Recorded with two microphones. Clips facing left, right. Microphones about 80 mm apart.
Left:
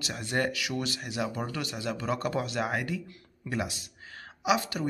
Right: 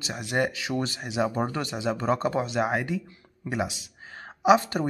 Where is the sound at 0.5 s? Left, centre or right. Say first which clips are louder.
Right 3 dB; right.